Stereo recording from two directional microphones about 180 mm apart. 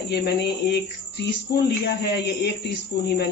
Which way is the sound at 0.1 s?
70° left (ahead or behind).